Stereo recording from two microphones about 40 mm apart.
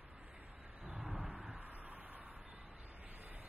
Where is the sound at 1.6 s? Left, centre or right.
Right.